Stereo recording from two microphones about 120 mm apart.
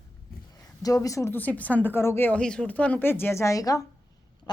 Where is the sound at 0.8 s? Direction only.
30° left (ahead or behind).